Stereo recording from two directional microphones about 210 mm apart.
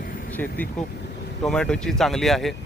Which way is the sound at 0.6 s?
5° left (ahead or behind).